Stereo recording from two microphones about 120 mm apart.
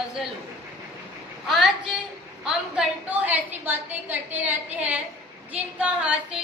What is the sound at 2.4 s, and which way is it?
A woman's voice, 5° right (ahead or behind).